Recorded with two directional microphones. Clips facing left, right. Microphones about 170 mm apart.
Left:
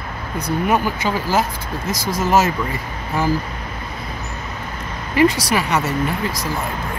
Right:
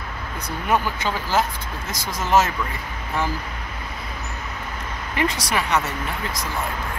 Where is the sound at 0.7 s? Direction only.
10° left (ahead or behind).